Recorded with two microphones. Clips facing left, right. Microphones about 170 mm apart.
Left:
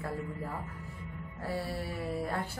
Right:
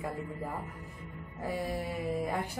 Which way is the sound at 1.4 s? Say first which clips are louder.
Right 2 dB; 15° right (ahead or behind).